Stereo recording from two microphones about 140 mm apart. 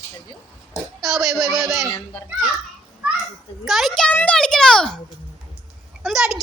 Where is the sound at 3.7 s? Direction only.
Centre (ahead or behind).